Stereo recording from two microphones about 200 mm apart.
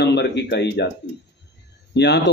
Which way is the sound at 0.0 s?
60° left (ahead or behind).